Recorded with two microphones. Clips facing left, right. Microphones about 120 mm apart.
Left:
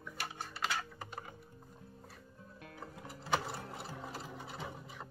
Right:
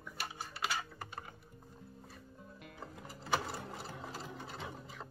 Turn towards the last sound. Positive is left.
turn(degrees=5)  # may be behind; listen again after turning